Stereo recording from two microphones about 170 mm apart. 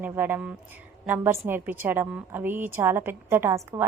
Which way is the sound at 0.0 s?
10° right (ahead or behind).